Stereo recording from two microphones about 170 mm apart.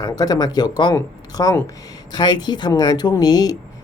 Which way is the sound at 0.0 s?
20° left (ahead or behind).